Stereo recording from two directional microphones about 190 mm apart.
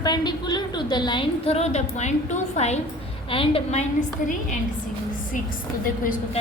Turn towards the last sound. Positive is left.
turn(degrees=45)  # may be behind; listen again after turning